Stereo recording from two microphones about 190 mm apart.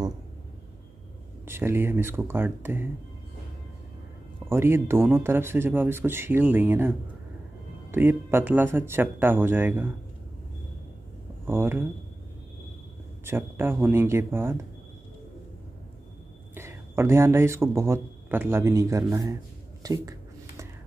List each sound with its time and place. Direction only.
1.5 s speech: 10° right (ahead or behind)
4.5 s speech: 10° right (ahead or behind)
7.9 s speech: 10° right (ahead or behind)
11.4 s speech: 10° right (ahead or behind)
13.2 s speech: 10° right (ahead or behind)
16.5 s speech: 15° right (ahead or behind)
19.8 s a sound: 20° right (ahead or behind)